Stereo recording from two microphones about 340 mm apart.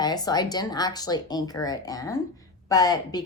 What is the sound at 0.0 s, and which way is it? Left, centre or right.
A woman's voice, centre.